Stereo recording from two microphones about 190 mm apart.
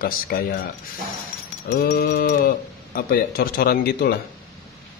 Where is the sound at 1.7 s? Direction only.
50° left (ahead or behind).